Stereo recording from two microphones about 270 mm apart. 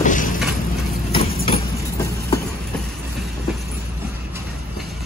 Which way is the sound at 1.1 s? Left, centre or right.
Centre.